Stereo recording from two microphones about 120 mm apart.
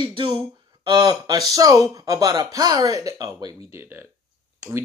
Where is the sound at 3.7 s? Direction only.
20° right (ahead or behind).